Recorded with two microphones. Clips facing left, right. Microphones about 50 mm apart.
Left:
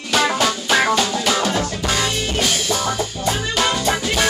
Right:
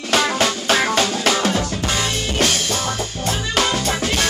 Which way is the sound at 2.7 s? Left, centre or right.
Centre.